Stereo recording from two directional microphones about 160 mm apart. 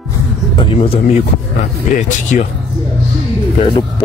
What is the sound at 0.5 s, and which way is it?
Speech, 35° left (ahead or behind).